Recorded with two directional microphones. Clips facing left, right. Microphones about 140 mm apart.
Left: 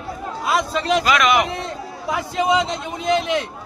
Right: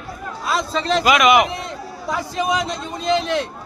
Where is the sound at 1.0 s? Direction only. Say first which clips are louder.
Right 6 dB; 15° right (ahead or behind).